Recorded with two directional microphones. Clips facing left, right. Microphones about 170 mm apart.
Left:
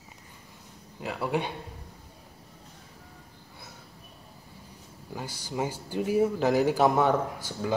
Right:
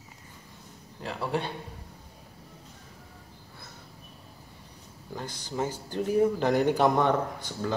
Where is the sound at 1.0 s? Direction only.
10° left (ahead or behind).